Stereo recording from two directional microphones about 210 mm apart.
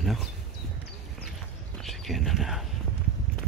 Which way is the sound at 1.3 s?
Centre (ahead or behind).